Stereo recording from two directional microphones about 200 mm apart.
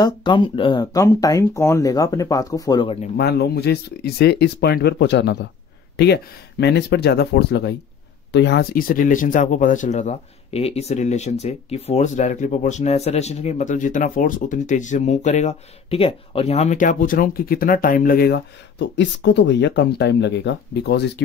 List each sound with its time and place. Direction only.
0.0 s speech: 25° left (ahead or behind)
3.2 s speech: 55° left (ahead or behind)